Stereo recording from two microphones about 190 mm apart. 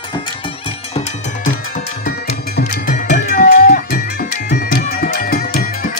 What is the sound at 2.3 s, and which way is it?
Music, 40° left (ahead or behind).